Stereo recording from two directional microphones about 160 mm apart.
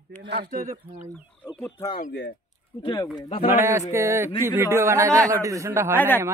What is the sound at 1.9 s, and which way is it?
Speech, 75° left (ahead or behind).